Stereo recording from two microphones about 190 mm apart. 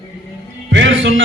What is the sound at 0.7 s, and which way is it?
Speech, 75° right (ahead or behind).